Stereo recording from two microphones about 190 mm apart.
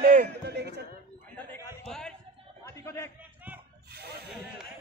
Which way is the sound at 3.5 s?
10° right (ahead or behind).